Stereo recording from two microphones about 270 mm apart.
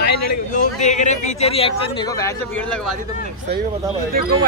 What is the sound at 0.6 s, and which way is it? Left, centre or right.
Speech, left.